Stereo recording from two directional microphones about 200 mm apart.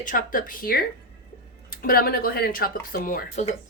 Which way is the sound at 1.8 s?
50° left (ahead or behind).